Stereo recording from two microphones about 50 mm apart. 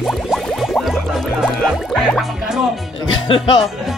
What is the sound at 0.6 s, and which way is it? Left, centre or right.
Music, centre.